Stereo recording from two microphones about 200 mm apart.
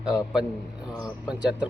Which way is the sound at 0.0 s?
5° right (ahead or behind).